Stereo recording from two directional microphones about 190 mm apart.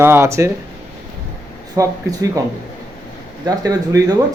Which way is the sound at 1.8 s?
15° right (ahead or behind).